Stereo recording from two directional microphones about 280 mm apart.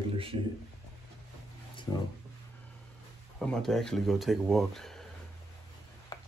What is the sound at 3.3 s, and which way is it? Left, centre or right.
Speech, centre.